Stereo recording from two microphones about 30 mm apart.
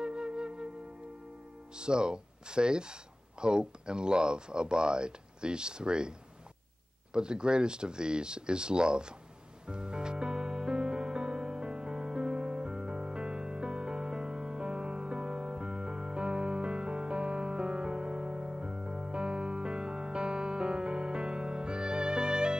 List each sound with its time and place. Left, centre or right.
0.0 s music: right
1.8 s speech: right
7.2 s speech: right
9.7 s music: right